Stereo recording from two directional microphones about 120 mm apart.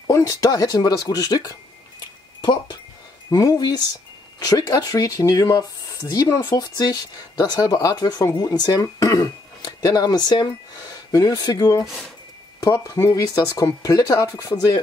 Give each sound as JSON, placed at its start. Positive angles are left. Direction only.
{"t": 0.0, "sound": "speech", "side_deg": 30}
{"t": 3.3, "sound": "speech", "side_deg": 30}
{"t": 11.8, "sound": "speech", "side_deg": 0}
{"t": 12.6, "sound": "speech", "side_deg": 25}